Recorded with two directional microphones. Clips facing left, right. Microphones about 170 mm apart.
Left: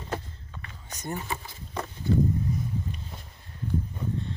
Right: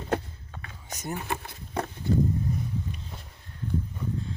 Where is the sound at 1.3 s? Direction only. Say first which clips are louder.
Right 2 dB; 60° right (ahead or behind).